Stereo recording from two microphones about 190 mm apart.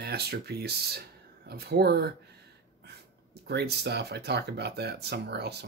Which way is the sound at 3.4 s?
60° right (ahead or behind).